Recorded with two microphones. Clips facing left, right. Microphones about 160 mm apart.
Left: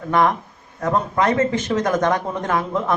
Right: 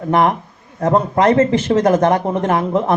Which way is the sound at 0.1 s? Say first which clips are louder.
Right 3 dB; 25° right (ahead or behind).